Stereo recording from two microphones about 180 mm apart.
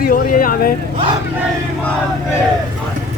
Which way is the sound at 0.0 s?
50° left (ahead or behind).